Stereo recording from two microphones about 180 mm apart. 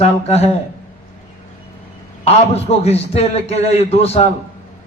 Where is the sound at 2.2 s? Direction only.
35° left (ahead or behind).